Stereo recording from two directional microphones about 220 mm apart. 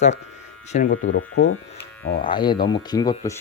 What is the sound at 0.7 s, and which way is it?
Speech, 35° left (ahead or behind).